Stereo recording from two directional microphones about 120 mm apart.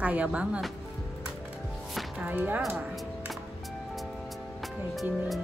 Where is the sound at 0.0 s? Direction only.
10° right (ahead or behind).